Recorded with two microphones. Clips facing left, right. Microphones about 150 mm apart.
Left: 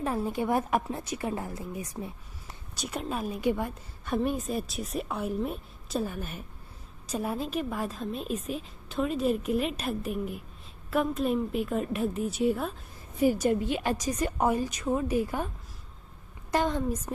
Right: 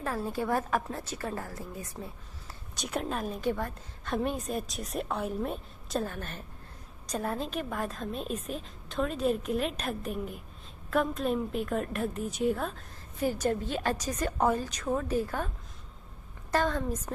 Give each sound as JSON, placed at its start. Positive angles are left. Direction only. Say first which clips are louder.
{"t": 0.0, "sound": "a woman's voice", "louder": "left 3 dB", "side_deg": 20}
{"t": 2.7, "sound": "a woman's voice", "louder": "even", "side_deg": 0}
{"t": 16.5, "sound": "a woman's voice", "louder": "left 1 dB", "side_deg": 15}